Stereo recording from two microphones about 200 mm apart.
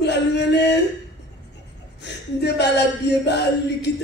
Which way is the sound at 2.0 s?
60° left (ahead or behind).